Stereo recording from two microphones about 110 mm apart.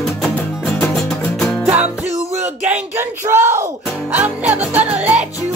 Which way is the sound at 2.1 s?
90° right.